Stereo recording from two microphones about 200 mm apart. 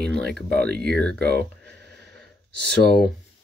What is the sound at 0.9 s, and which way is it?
Speech, 5° left (ahead or behind).